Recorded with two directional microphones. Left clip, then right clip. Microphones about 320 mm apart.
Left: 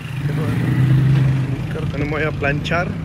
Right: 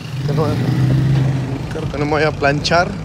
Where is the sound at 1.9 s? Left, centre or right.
Centre.